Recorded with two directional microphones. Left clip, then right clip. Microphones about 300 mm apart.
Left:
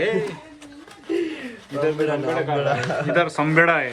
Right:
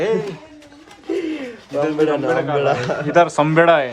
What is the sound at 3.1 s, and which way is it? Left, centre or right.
Speech, centre.